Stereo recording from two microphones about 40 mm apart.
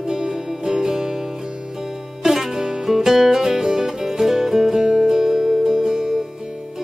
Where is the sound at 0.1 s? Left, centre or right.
Centre.